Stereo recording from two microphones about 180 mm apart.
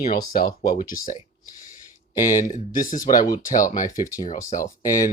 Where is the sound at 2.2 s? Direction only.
45° left (ahead or behind).